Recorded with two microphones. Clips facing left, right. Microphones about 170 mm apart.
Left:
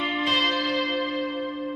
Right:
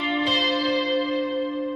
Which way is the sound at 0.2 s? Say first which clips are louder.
Right 3 dB; 30° right (ahead or behind).